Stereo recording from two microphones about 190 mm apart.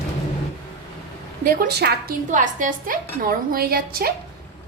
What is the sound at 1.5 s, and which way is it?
Speech, 55° right (ahead or behind).